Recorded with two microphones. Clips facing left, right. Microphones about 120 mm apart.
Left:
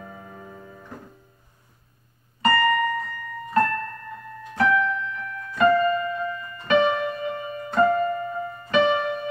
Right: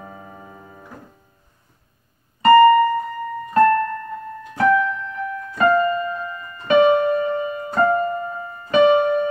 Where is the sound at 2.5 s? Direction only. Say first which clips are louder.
Right 12 dB; 35° right (ahead or behind).